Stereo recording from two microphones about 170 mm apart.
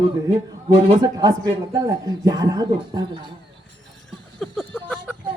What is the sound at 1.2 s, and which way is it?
A man's voice, 20° right (ahead or behind).